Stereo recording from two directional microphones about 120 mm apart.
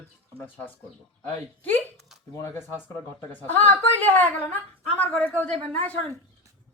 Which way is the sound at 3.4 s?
15° left (ahead or behind).